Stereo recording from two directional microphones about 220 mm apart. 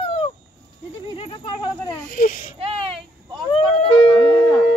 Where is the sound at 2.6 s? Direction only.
25° right (ahead or behind).